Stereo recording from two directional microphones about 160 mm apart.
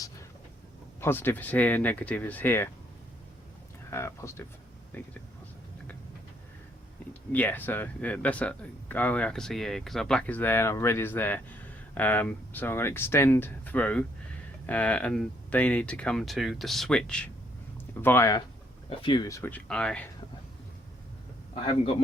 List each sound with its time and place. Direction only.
1.0 s speech: 15° left (ahead or behind)
3.8 s speech: 15° left (ahead or behind)
7.1 s speech: 10° left (ahead or behind)
18.9 s speech: 30° left (ahead or behind)
19.3 s speech: 10° left (ahead or behind)
21.5 s a man's voice: 35° left (ahead or behind)